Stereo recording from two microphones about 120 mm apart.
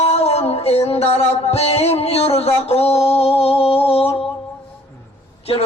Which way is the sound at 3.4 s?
55° left (ahead or behind).